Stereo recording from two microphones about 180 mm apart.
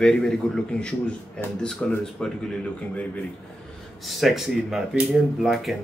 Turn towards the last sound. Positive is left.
turn(degrees=0)  # may be behind; listen again after turning